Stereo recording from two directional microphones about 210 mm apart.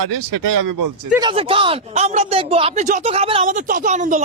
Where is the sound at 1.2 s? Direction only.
25° right (ahead or behind).